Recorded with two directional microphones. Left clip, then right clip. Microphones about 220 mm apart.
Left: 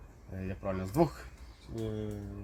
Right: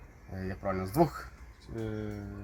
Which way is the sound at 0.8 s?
30° left (ahead or behind).